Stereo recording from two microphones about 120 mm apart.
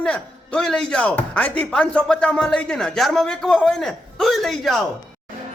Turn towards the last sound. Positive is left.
turn(degrees=0)  # may be behind; listen again after turning